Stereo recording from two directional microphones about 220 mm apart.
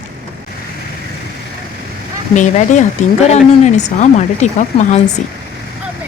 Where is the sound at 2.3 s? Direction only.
35° left (ahead or behind).